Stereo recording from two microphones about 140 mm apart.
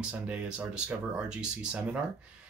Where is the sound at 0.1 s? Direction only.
5° right (ahead or behind).